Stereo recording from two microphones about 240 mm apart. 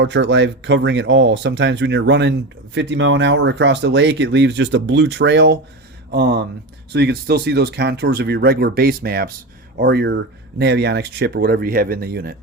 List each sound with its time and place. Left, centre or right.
0.0 s speech: right